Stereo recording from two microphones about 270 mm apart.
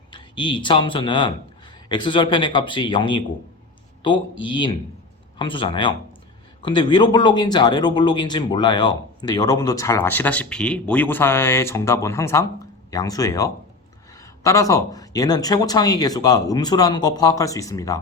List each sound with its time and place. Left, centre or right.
0.1 s a man's voice: centre